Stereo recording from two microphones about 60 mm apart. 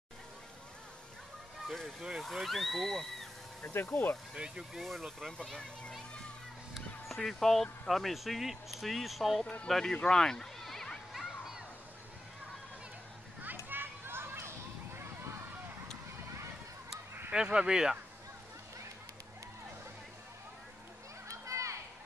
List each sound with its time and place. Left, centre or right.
1.7 s speech: centre
3.6 s speech: left
4.3 s speech: centre
6.7 s speech: centre
9.9 s children playing: centre
13.7 s children playing: right
17.3 s speech: centre
21.3 s children playing: right